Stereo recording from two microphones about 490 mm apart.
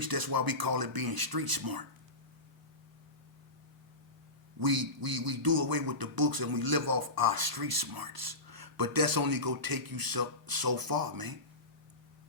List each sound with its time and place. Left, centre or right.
0.0 s speech: right
4.6 s speech: right